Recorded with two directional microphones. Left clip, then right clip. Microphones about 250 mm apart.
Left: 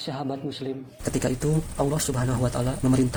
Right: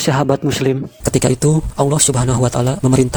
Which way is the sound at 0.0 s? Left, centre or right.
Right.